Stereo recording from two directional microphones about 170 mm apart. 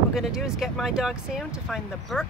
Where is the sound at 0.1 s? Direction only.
Centre (ahead or behind).